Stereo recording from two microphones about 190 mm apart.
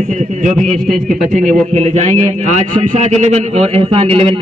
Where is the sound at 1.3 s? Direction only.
40° right (ahead or behind).